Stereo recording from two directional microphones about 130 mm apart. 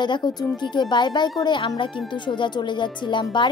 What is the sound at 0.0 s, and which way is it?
Speech, 35° left (ahead or behind).